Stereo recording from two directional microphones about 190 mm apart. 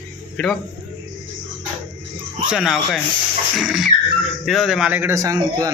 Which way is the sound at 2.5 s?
Centre (ahead or behind).